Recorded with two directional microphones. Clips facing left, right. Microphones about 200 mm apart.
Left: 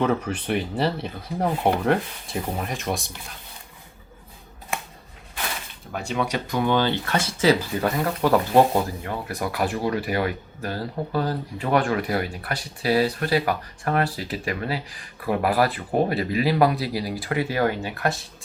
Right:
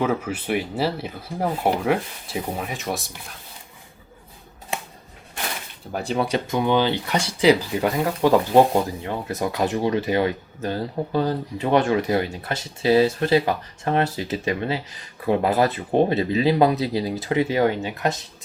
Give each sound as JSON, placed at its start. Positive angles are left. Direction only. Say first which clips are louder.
{"t": 0.0, "sound": "speech", "louder": "even", "side_deg": -5}
{"t": 5.9, "sound": "speech", "louder": "right 3 dB", "side_deg": -35}